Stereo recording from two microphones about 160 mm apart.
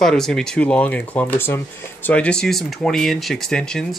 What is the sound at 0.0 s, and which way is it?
Speech, 5° left (ahead or behind).